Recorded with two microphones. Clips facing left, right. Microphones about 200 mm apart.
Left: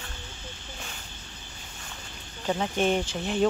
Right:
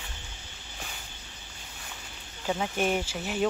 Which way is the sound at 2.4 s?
5° right (ahead or behind).